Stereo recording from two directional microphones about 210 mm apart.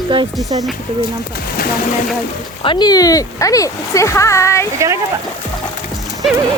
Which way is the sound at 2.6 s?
20° left (ahead or behind).